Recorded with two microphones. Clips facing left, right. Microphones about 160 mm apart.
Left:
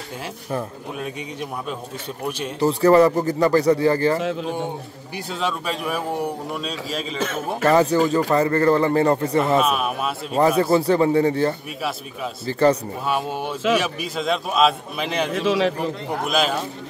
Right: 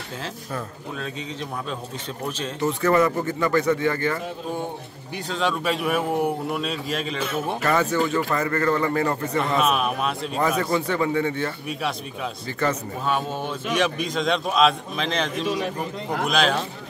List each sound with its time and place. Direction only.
0.9 s a man's voice: 10° left (ahead or behind)
2.6 s speech: 35° left (ahead or behind)
5.1 s a man's voice: 5° left (ahead or behind)
7.6 s speech: 35° left (ahead or behind)
9.6 s a man's voice: centre (ahead or behind)
10.6 s speech: 35° left (ahead or behind)
13.0 s a man's voice: 10° left (ahead or behind)
15.4 s a man's voice: 90° left
16.3 s a man's voice: 5° left (ahead or behind)